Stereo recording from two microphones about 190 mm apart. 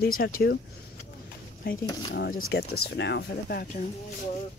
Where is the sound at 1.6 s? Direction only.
50° left (ahead or behind).